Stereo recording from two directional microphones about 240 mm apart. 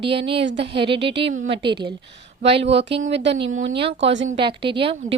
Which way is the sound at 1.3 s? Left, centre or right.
Right.